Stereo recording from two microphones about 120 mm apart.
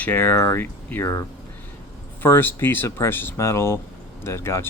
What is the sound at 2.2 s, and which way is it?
Speech, 15° left (ahead or behind).